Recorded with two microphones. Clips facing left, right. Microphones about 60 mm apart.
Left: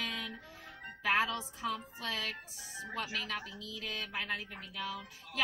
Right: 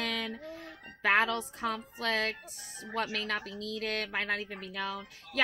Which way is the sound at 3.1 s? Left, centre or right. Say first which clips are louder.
Right 4 dB; right.